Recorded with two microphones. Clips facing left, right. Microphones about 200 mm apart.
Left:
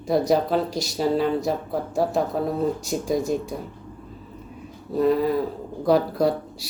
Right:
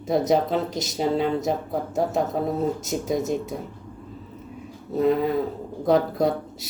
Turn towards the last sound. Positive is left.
turn(degrees=-20)  # may be behind; listen again after turning